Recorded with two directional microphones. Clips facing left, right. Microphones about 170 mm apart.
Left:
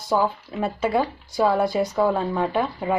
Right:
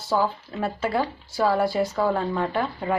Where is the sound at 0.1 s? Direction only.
15° left (ahead or behind).